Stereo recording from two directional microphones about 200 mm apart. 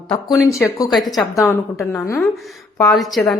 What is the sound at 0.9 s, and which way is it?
A woman's voice, centre (ahead or behind).